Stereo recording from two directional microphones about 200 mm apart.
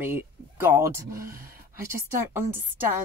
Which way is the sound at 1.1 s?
45° right (ahead or behind).